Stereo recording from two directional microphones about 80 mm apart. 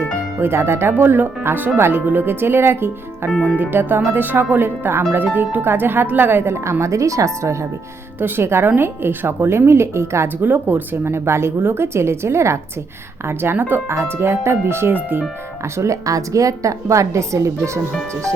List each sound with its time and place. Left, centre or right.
0.3 s speech: right
3.3 s speech: centre
3.6 s a woman's voice: right
10.4 s a woman's voice: right